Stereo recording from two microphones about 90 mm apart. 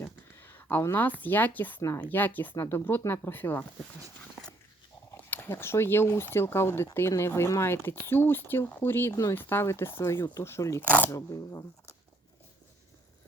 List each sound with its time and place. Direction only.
0.0 s speech: 25° left (ahead or behind)
4.2 s dog: 10° left (ahead or behind)
5.1 s speech: 20° left (ahead or behind)
10.8 s speech: 20° left (ahead or behind)
11.1 s speech: 35° left (ahead or behind)